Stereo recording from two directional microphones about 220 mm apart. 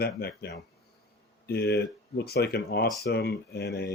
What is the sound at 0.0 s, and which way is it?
Speech, 45° left (ahead or behind).